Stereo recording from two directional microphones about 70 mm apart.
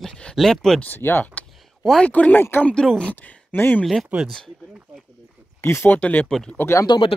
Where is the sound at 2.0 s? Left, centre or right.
Left.